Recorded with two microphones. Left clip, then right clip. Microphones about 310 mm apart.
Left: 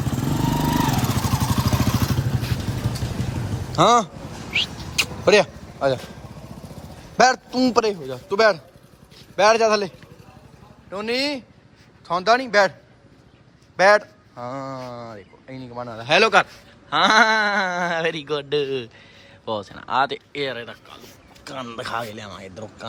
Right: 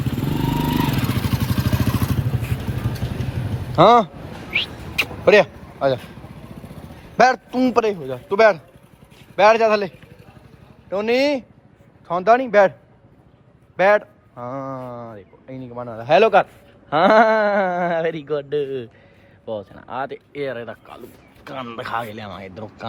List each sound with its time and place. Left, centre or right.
0.7 s vehicle: centre
3.7 s speech: centre
4.5 s a sound: centre
7.2 s a man's voice: centre
13.7 s a man's voice: centre